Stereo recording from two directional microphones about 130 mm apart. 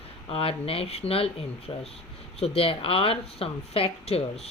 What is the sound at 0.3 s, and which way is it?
A woman's voice, 50° left (ahead or behind).